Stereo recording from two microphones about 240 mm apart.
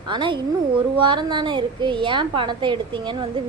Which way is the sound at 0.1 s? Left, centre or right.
Centre.